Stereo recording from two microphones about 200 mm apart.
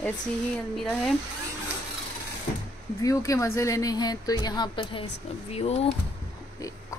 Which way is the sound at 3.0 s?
15° left (ahead or behind).